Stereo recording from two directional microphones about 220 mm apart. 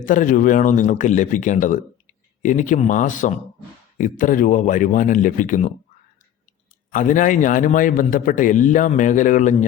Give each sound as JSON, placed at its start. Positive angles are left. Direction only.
{"t": 0.0, "sound": "a man's voice", "side_deg": 35}
{"t": 6.9, "sound": "a man's voice", "side_deg": 35}